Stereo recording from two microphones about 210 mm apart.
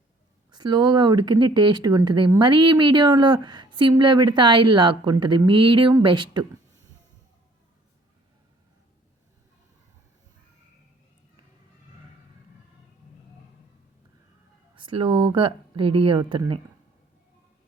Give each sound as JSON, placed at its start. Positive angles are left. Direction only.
{"t": 0.5, "sound": "speech", "side_deg": -20}
{"t": 14.8, "sound": "speech", "side_deg": -25}